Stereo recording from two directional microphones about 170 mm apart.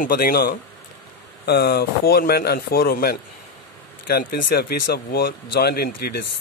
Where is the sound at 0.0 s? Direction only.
60° left (ahead or behind).